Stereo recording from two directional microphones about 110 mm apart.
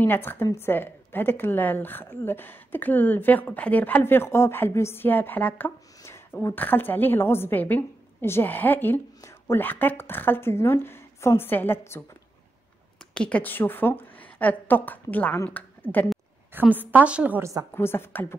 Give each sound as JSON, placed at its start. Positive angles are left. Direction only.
{"t": 0.0, "sound": "a woman's voice", "side_deg": 20}
{"t": 13.1, "sound": "a woman's voice", "side_deg": 10}
{"t": 15.9, "sound": "speech", "side_deg": -60}
{"t": 16.5, "sound": "a woman's voice", "side_deg": -15}
{"t": 17.7, "sound": "a woman's voice", "side_deg": 20}